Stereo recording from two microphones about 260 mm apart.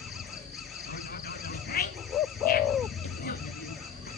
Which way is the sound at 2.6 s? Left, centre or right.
Centre.